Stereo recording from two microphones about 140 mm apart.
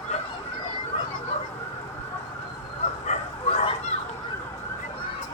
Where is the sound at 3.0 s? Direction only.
55° left (ahead or behind).